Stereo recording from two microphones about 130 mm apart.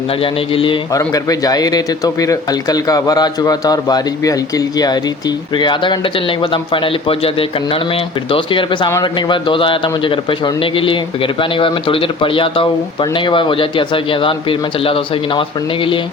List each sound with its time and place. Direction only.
0.2 s a man's voice: 45° left (ahead or behind)
0.9 s a man's voice: 30° left (ahead or behind)